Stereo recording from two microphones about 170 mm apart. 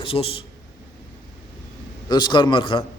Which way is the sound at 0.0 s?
35° left (ahead or behind).